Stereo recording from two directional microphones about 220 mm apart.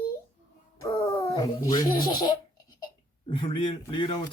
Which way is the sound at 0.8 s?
15° left (ahead or behind).